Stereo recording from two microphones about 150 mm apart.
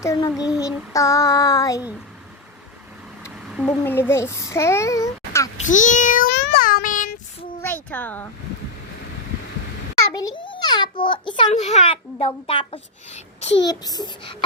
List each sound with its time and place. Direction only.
0.0 s child singing: 20° left (ahead or behind)
0.3 s child singing: 5° right (ahead or behind)
0.6 s child singing: 20° left (ahead or behind)
3.2 s a sound: 5° right (ahead or behind)
3.8 s a child's voice: 15° left (ahead or behind)
5.5 s a sound: 55° left (ahead or behind)
7.6 s a child's voice: 10° left (ahead or behind)
10.2 s a child's voice: 30° left (ahead or behind)
11.4 s a child's voice: 50° left (ahead or behind)
13.6 s child singing: 25° left (ahead or behind)